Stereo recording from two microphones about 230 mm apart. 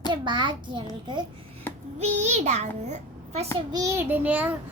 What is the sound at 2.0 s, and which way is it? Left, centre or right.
A child's voice, right.